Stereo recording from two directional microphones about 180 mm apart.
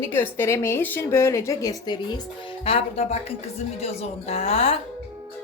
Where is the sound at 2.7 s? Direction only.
35° left (ahead or behind).